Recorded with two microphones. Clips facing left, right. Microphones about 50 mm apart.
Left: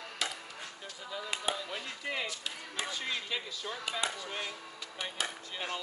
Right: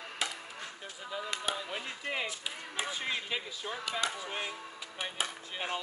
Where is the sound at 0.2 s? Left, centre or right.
Right.